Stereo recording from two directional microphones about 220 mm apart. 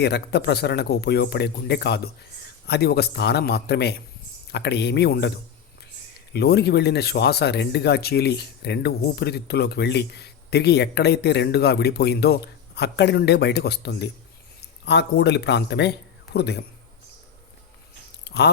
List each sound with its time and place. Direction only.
0.0 s speech: 50° left (ahead or behind)
6.3 s speech: 45° left (ahead or behind)
18.3 s speech: 50° left (ahead or behind)